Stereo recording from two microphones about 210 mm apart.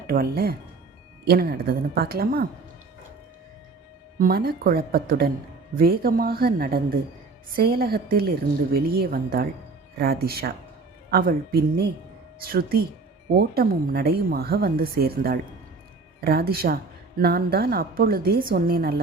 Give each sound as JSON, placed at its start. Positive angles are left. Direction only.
{"t": 0.1, "sound": "a woman's voice", "side_deg": -45}
{"t": 4.2, "sound": "a woman's voice", "side_deg": -45}